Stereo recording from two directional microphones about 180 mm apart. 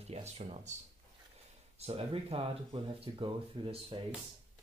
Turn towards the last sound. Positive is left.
turn(degrees=-30)  # may be behind; listen again after turning